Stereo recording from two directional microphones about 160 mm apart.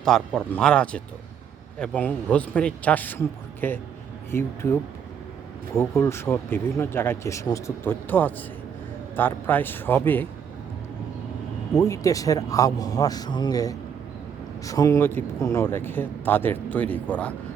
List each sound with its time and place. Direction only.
0.0 s a man's voice: 5° left (ahead or behind)
5.7 s speech: 15° left (ahead or behind)
11.8 s a man's voice: 20° left (ahead or behind)